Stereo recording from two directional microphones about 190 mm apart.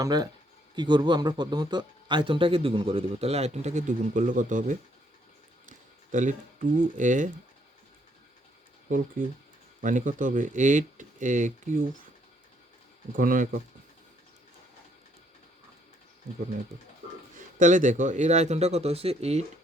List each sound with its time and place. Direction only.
0.0 s speech: 20° right (ahead or behind); by 7.3 s 40° right (ahead or behind)
9.8 s a man's voice: 40° right (ahead or behind)
13.1 s speech: 45° right (ahead or behind)
17.3 s a man's voice: 40° right (ahead or behind)